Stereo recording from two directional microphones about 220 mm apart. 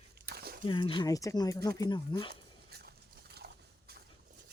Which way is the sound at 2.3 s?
45° right (ahead or behind).